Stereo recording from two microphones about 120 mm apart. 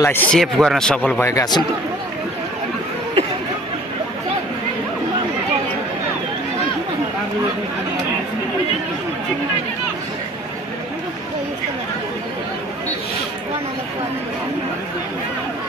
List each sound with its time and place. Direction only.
0.0 s speech: 20° left (ahead or behind)
0.3 s speech: centre (ahead or behind)
1.2 s a man's voice: 30° left (ahead or behind)